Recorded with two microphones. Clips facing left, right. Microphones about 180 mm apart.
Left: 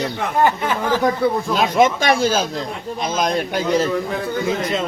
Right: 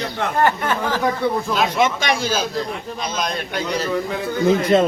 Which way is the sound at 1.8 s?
50° left (ahead or behind).